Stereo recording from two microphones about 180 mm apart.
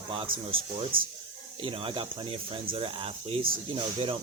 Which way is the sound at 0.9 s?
50° right (ahead or behind).